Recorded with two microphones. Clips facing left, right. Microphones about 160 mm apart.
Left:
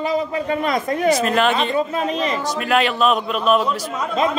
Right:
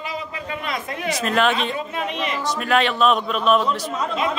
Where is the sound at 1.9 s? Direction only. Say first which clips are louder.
Left 5 dB; 35° left (ahead or behind).